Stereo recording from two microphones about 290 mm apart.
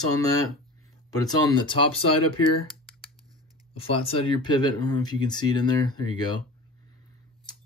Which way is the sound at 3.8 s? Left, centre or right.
Centre.